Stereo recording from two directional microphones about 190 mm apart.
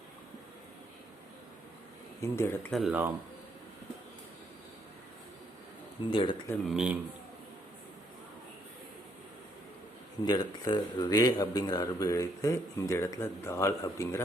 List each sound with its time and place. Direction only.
2.2 s speech: 15° left (ahead or behind)
2.7 s speech: 5° right (ahead or behind)
6.1 s speech: 25° left (ahead or behind)
6.7 s speech: 5° right (ahead or behind)
10.2 s speech: 20° left (ahead or behind)